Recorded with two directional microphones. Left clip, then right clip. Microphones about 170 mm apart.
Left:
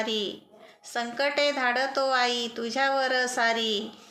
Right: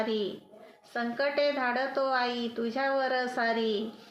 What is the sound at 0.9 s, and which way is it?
Speech, 15° left (ahead or behind).